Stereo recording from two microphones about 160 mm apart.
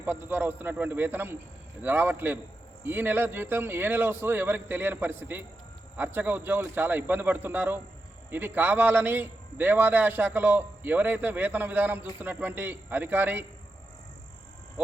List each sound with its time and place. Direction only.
0.0 s a man's voice: 10° right (ahead or behind)